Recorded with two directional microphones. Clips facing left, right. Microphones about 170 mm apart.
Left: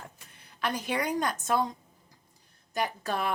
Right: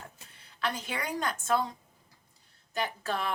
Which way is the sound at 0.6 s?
15° left (ahead or behind).